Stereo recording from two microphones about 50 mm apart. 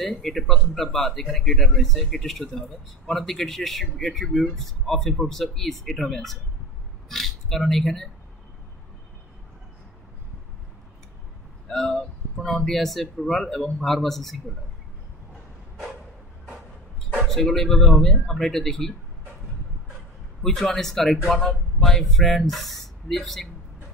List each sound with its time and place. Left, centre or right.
0.2 s a man's voice: centre
11.7 s speech: centre
17.2 s a man's voice: centre
20.4 s a man's voice: centre